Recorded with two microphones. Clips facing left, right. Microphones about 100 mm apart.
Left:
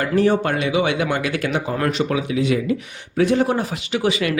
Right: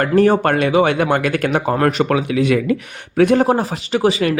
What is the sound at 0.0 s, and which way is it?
Speech, 50° right (ahead or behind).